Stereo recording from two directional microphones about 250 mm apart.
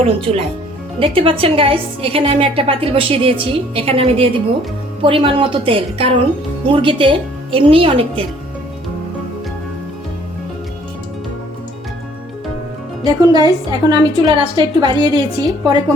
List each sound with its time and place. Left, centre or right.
0.3 s a woman's voice: right
13.1 s a woman's voice: centre